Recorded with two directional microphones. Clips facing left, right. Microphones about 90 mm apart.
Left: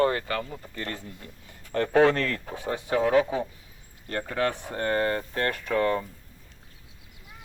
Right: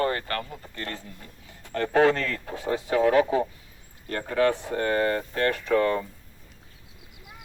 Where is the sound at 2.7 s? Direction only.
15° left (ahead or behind).